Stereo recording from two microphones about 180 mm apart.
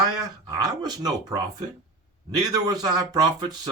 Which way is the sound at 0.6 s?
20° right (ahead or behind).